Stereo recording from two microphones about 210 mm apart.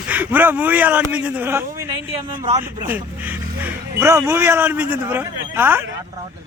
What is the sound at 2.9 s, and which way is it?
Speech, 10° right (ahead or behind).